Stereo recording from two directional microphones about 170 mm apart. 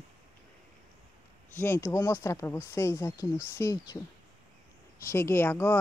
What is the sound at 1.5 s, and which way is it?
Speech, 15° left (ahead or behind).